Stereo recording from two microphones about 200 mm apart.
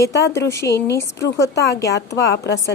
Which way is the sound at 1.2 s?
60° left (ahead or behind).